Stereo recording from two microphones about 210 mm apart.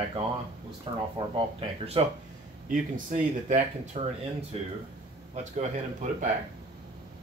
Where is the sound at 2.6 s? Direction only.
40° right (ahead or behind).